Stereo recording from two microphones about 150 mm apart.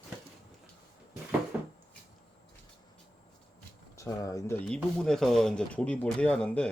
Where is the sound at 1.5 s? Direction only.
10° right (ahead or behind).